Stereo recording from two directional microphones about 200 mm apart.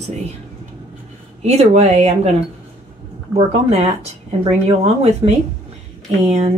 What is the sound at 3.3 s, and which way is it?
Speech, 30° right (ahead or behind).